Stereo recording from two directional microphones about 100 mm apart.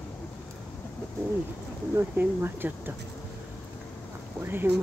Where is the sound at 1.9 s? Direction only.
20° right (ahead or behind).